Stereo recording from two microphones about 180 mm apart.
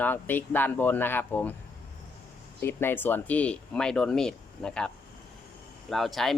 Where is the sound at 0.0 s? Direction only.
10° left (ahead or behind).